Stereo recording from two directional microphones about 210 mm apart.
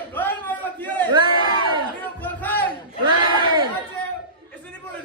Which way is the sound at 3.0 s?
20° right (ahead or behind).